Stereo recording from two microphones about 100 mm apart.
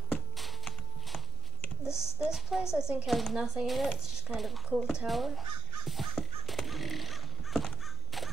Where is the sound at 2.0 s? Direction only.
5° right (ahead or behind).